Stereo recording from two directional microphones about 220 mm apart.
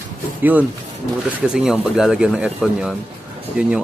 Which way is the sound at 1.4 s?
5° right (ahead or behind).